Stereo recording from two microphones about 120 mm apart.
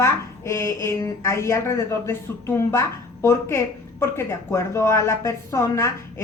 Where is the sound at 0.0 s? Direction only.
25° left (ahead or behind).